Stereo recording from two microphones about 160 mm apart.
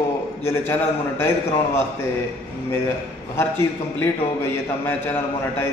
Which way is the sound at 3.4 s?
15° left (ahead or behind).